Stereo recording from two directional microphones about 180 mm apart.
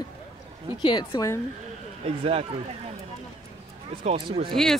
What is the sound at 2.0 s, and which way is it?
Speech, 35° right (ahead or behind).